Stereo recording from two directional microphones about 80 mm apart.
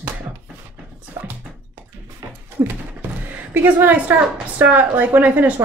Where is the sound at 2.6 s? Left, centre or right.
Right.